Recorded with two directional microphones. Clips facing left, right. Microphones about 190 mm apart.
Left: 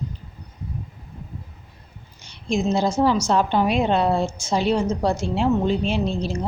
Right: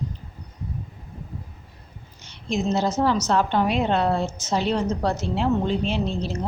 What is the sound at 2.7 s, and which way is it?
Speech, 10° left (ahead or behind).